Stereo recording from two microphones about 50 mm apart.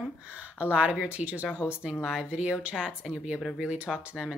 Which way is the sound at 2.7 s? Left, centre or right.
Centre.